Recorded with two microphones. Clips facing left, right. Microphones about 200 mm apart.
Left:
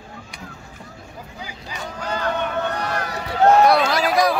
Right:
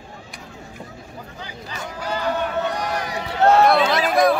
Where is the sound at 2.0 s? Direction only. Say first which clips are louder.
Right 1 dB; 10° right (ahead or behind).